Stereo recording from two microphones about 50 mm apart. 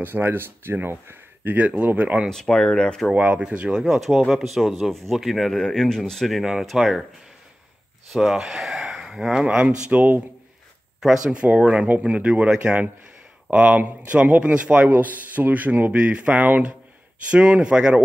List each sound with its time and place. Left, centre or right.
0.0 s speech: right
1.4 s speech: right
2.2 s speech: centre
3.2 s speech: right
3.8 s speech: centre
8.1 s speech: centre
9.8 s speech: right
11.0 s speech: centre
11.3 s speech: right